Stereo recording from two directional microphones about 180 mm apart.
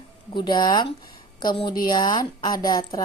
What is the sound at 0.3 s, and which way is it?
Speech, 25° left (ahead or behind).